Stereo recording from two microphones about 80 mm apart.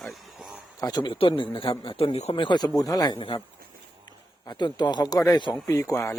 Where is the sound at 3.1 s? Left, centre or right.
Left.